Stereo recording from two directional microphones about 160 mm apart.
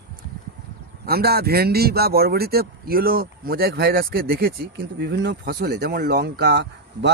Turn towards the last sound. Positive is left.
turn(degrees=-90)